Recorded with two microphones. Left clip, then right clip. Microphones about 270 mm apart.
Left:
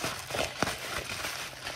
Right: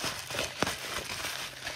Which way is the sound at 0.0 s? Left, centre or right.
Centre.